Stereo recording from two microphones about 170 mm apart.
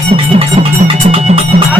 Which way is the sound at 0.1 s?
35° right (ahead or behind).